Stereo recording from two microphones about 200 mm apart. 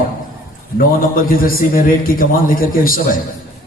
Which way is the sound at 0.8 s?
45° left (ahead or behind).